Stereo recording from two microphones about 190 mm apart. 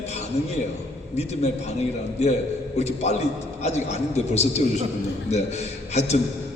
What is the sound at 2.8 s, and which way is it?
A man's voice, 35° left (ahead or behind).